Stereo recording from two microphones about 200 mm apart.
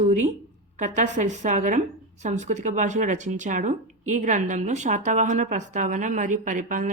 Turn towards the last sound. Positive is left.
turn(degrees=-40)  # may be behind; listen again after turning